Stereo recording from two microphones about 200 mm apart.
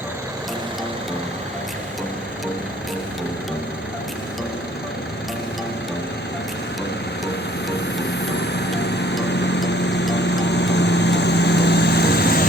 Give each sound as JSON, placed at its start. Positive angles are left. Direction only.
{"t": 8.4, "sound": "vehicle", "side_deg": 60}